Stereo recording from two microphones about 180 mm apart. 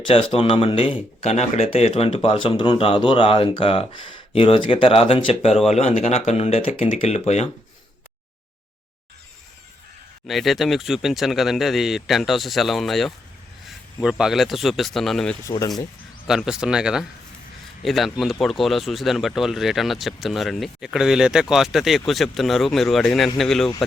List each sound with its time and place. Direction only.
0.1 s speech: 30° left (ahead or behind)
10.2 s speech: centre (ahead or behind)
15.4 s speech: 20° left (ahead or behind)
16.2 s speech: 5° right (ahead or behind)